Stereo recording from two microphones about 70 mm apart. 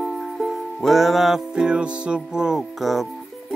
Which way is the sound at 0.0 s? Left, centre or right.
Centre.